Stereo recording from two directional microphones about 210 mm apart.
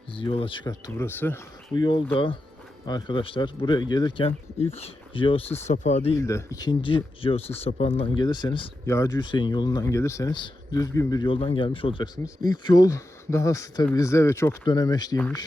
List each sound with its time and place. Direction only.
0.1 s speech: 25° left (ahead or behind)
6.1 s speech: 15° left (ahead or behind)